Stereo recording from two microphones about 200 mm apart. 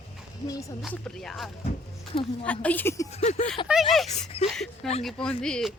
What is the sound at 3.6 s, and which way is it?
Speech, centre (ahead or behind).